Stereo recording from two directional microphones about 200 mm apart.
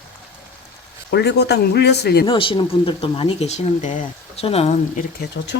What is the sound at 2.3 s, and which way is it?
Speech, 25° left (ahead or behind).